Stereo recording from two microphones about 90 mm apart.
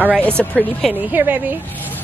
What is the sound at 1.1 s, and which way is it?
Speech, 20° right (ahead or behind).